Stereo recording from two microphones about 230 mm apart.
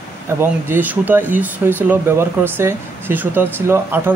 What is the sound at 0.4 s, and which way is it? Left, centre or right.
Speech, centre.